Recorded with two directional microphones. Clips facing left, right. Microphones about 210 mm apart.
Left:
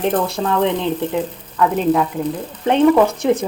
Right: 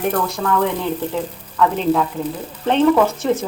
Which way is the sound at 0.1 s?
25° left (ahead or behind).